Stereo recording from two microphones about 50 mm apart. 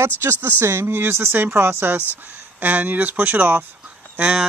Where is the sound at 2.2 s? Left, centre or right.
Right.